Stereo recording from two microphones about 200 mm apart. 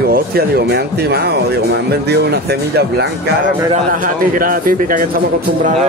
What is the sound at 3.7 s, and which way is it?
Speech, 45° right (ahead or behind).